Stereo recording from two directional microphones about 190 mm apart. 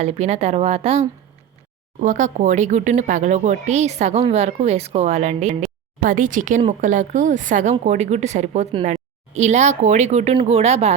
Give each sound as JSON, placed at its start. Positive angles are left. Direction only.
{"t": 0.0, "sound": "speech", "side_deg": -35}